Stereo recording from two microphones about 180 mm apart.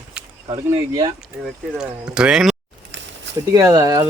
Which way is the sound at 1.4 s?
5° right (ahead or behind).